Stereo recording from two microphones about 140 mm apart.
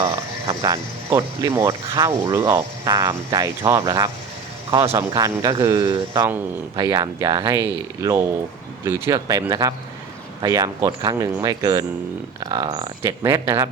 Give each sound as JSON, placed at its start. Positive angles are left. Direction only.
{"t": 0.0, "sound": "speech", "side_deg": -25}
{"t": 13.0, "sound": "speech", "side_deg": -20}